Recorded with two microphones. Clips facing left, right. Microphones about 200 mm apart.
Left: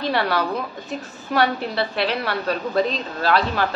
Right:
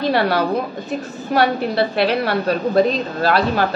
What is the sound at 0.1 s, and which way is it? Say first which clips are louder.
Speech: right 4 dB; 40° right (ahead or behind).